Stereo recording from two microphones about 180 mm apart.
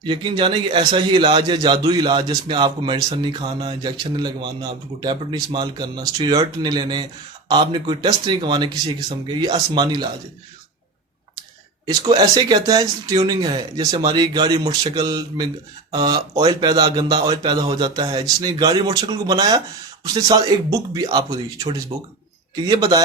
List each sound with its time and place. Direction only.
0.0 s a man's voice: 25° right (ahead or behind)
11.9 s a man's voice: 20° right (ahead or behind)